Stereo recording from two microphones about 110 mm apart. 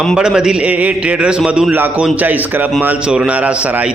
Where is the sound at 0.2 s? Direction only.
5° right (ahead or behind).